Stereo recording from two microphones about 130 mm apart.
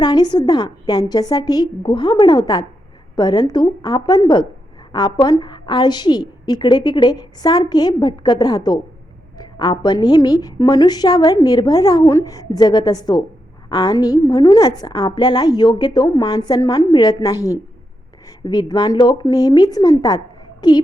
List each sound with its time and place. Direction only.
0.0 s a woman's voice: 30° left (ahead or behind)